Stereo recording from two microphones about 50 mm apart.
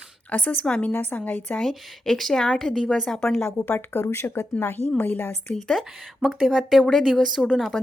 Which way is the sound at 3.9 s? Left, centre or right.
Left.